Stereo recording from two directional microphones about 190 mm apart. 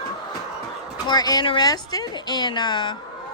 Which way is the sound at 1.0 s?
20° left (ahead or behind).